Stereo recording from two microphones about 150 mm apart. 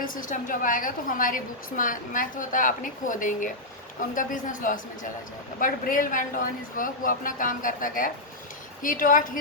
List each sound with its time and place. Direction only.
0.0 s a woman's voice: 65° left (ahead or behind)